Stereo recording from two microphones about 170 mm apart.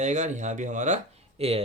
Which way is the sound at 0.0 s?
45° right (ahead or behind).